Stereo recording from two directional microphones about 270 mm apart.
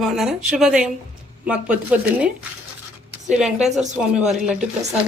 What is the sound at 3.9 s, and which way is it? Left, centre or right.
Speech, centre.